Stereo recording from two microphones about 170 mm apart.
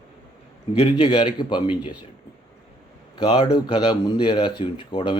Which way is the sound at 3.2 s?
30° left (ahead or behind).